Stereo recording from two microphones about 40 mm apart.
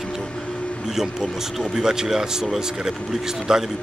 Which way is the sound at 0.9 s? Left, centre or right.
Centre.